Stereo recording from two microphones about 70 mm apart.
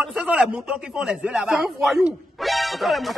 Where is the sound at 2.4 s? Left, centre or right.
Centre.